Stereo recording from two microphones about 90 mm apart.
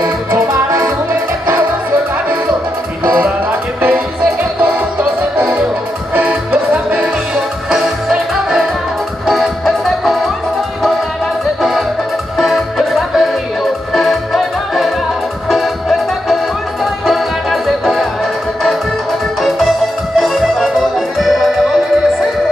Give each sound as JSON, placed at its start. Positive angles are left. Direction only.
{"t": 3.1, "sound": "music", "side_deg": -15}
{"t": 4.4, "sound": "music", "side_deg": -10}
{"t": 12.4, "sound": "music", "side_deg": 0}
{"t": 20.2, "sound": "accordion", "side_deg": 0}